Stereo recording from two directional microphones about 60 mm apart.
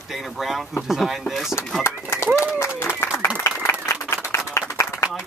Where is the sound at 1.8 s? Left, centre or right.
Left.